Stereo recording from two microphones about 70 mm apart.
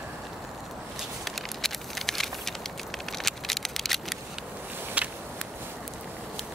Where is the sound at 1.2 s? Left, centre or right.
Centre.